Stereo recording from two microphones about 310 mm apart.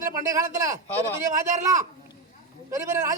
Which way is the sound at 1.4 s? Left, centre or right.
Right.